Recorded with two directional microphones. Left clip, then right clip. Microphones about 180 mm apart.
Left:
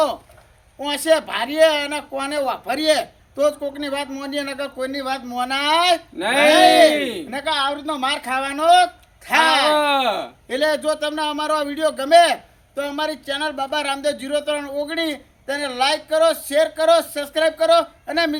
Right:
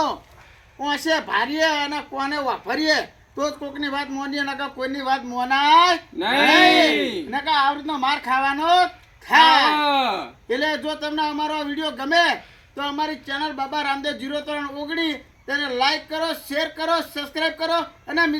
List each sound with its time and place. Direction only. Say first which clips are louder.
0.8 s a man's voice: left 4 dB; 35° left (ahead or behind)
6.1 s speech: left 2 dB; 15° left (ahead or behind)
7.3 s a man's voice: right 4 dB; 35° left (ahead or behind)
9.6 s speech: left 2 dB; 10° left (ahead or behind)
10.5 s a man's voice: left 4 dB; 35° left (ahead or behind)